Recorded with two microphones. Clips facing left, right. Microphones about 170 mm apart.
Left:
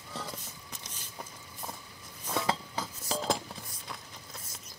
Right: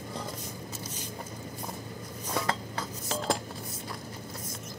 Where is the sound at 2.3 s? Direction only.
5° left (ahead or behind).